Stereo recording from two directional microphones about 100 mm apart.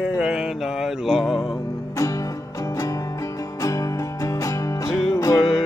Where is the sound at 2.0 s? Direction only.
35° left (ahead or behind).